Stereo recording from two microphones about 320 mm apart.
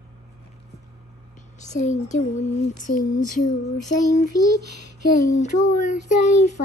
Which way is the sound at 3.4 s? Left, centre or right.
Left.